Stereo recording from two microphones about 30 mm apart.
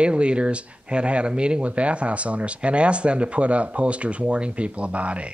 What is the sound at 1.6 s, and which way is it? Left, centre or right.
Speech, right.